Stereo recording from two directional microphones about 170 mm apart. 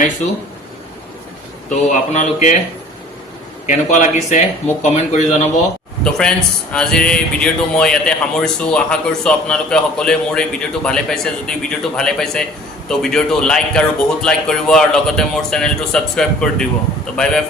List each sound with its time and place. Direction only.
1.7 s speech: 45° left (ahead or behind)
3.7 s speech: 45° left (ahead or behind)
6.1 s speech: 5° left (ahead or behind)